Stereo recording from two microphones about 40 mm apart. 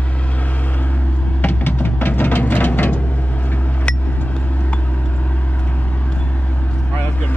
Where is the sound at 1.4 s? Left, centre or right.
Left.